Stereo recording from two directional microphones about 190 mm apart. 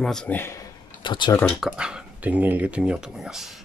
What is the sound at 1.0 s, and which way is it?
Speech, 25° left (ahead or behind).